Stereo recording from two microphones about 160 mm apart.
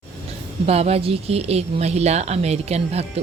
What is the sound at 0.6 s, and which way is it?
A woman's voice, 40° right (ahead or behind).